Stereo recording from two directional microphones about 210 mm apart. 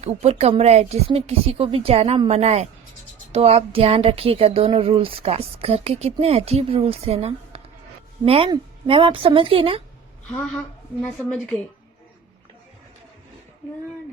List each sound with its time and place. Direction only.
0.0 s speech: 30° right (ahead or behind)
11.0 s a woman's voice: 5° left (ahead or behind)